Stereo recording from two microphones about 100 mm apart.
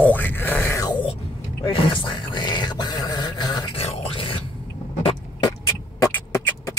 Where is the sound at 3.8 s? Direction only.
80° left; by 4.4 s 65° left (ahead or behind).